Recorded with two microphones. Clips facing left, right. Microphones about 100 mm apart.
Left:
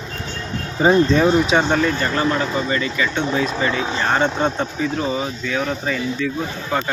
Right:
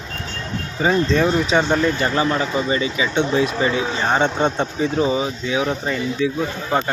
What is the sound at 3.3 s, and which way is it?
Speech, 5° right (ahead or behind).